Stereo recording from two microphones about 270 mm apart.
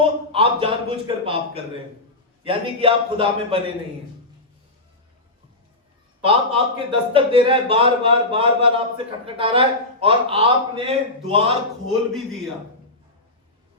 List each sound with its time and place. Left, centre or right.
0.0 s a man's voice: centre
6.2 s a man's voice: centre
12.1 s a man's voice: centre